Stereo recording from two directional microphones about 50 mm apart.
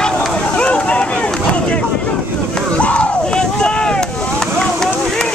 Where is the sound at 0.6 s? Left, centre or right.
Left.